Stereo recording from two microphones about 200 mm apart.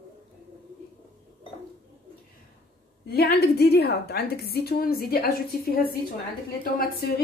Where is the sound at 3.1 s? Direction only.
50° left (ahead or behind).